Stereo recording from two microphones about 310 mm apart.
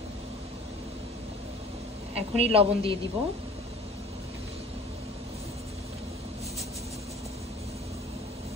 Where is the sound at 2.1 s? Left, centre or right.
Centre.